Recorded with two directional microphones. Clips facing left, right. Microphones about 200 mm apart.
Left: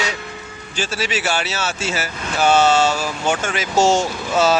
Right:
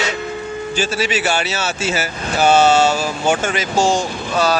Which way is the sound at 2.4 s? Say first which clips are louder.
Right 2 dB; 30° right (ahead or behind).